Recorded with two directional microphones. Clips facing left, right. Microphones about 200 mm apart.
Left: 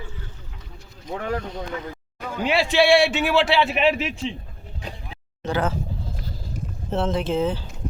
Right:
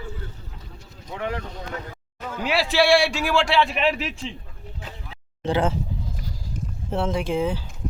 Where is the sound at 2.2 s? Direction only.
10° left (ahead or behind).